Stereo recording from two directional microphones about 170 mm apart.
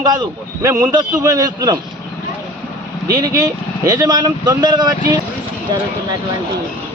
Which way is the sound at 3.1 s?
25° right (ahead or behind).